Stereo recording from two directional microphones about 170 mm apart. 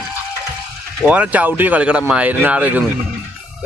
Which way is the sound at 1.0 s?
5° right (ahead or behind).